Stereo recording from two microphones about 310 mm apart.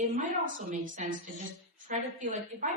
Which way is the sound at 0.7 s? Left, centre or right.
Right.